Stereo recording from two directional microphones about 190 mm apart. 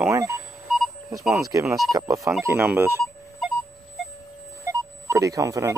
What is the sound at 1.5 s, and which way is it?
Speech, 15° right (ahead or behind).